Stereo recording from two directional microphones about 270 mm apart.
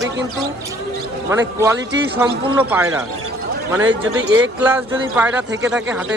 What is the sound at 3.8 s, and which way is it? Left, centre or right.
Speech, right.